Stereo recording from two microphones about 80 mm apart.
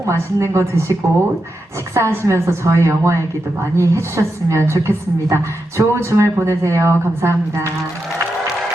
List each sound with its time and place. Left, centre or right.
0.0 s speech: right
1.9 s speech: right